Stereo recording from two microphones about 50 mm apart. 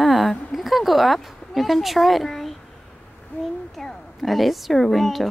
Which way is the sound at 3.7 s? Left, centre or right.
Centre.